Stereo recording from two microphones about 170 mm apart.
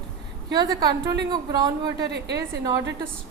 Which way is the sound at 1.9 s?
80° right.